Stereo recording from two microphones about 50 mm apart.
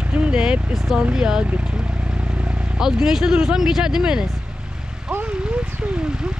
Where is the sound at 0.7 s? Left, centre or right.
Centre.